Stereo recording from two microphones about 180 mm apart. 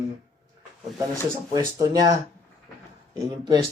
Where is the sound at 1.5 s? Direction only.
20° right (ahead or behind).